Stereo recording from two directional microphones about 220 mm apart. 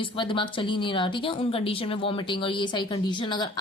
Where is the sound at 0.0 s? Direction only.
20° left (ahead or behind).